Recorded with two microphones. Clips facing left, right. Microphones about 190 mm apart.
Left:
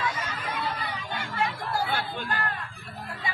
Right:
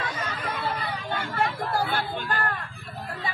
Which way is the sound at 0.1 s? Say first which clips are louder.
Right 2 dB; 60° right (ahead or behind).